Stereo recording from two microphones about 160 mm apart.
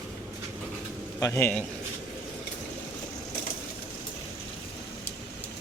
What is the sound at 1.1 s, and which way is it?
Speech, 15° left (ahead or behind).